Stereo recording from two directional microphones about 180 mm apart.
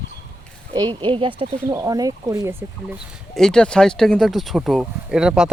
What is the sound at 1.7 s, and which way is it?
Speech, 20° right (ahead or behind).